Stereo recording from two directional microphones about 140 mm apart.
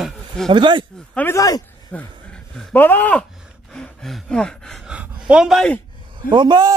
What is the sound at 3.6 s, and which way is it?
Gasp, 5° left (ahead or behind).